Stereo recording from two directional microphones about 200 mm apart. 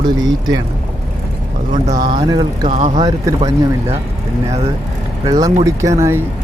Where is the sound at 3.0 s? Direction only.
20° right (ahead or behind).